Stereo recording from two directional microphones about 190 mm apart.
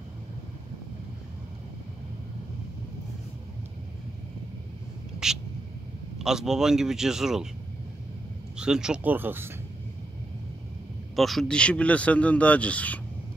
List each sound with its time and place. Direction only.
5.2 s a sound: 5° right (ahead or behind)
6.1 s a man's voice: 5° right (ahead or behind)
8.5 s speech: 5° right (ahead or behind)
11.1 s speech: centre (ahead or behind)